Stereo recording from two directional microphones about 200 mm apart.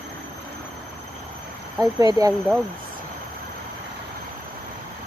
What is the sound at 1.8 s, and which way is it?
Speech, 15° right (ahead or behind).